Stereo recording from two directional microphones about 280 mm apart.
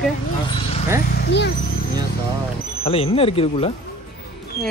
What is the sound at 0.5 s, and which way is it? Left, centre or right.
Vehicle, centre.